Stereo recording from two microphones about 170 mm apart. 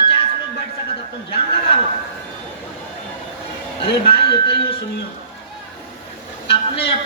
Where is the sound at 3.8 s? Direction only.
30° left (ahead or behind).